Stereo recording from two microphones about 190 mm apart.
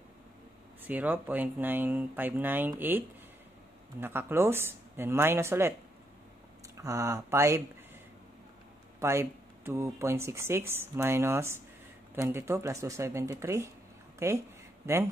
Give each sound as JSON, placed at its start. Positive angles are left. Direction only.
{"t": 0.8, "sound": "speech", "side_deg": -10}
{"t": 4.0, "sound": "speech", "side_deg": -10}
{"t": 6.8, "sound": "speech", "side_deg": -15}
{"t": 9.0, "sound": "speech", "side_deg": -15}